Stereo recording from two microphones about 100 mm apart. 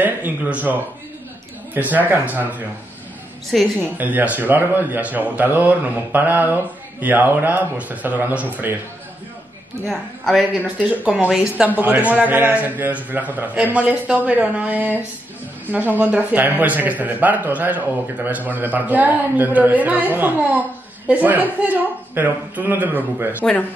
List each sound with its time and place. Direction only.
0.0 s a man's voice: 15° right (ahead or behind)
3.5 s a woman's voice: centre (ahead or behind)
4.0 s a man's voice: 15° right (ahead or behind)
9.8 s a woman's voice: centre (ahead or behind)
10.8 s a man's voice: 10° right (ahead or behind)
16.0 s a man's voice: 15° right (ahead or behind)